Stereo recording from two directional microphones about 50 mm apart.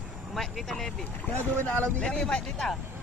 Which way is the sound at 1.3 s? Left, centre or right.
Left.